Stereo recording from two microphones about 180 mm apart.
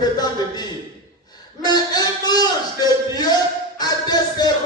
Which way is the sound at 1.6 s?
20° left (ahead or behind).